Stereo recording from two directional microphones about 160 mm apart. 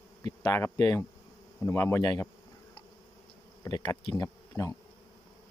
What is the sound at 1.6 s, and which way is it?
Insect, 15° left (ahead or behind).